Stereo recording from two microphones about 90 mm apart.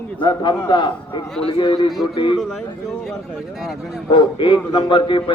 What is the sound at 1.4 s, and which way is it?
Speech, 80° left.